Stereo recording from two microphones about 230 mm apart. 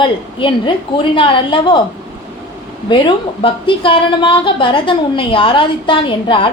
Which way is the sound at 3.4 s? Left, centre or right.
Left.